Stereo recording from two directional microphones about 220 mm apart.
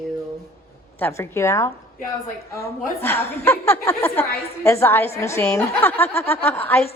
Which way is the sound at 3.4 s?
10° left (ahead or behind).